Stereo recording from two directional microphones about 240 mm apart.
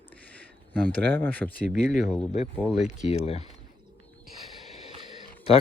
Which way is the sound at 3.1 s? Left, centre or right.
Left.